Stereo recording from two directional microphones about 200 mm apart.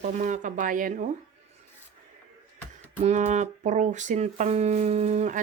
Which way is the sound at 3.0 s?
35° right (ahead or behind).